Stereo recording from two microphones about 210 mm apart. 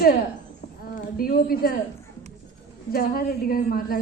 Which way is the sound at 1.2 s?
45° left (ahead or behind).